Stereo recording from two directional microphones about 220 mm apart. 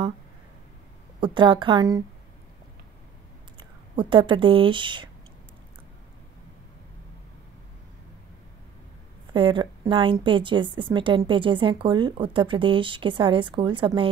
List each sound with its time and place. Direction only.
1.2 s a woman's voice: 20° right (ahead or behind)
3.5 s speech: 20° right (ahead or behind)
9.3 s a woman's voice: 20° right (ahead or behind)